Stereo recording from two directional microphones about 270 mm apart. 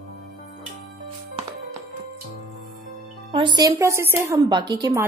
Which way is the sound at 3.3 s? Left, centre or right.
Centre.